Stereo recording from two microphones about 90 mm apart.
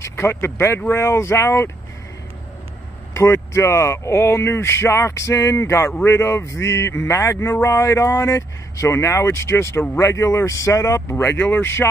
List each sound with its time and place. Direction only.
0.0 s speech: 25° left (ahead or behind)
3.2 s speech: 30° left (ahead or behind)
11.1 s speech: 20° left (ahead or behind)
11.6 s speech: 30° left (ahead or behind)